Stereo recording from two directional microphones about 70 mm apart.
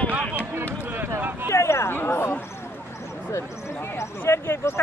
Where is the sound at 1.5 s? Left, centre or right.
Left.